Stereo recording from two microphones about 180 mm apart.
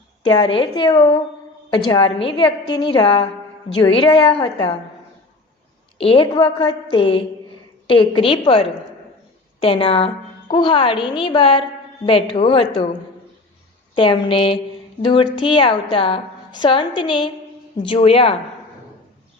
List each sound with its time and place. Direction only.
0.3 s a woman's voice: 30° left (ahead or behind)
6.0 s a woman's voice: 30° left (ahead or behind)
13.9 s a woman's voice: 30° left (ahead or behind)